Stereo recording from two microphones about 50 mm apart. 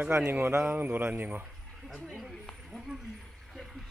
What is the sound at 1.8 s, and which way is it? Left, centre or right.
Speech, centre.